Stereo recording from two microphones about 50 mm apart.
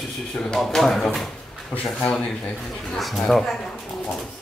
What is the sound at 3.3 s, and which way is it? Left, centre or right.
Speech, centre.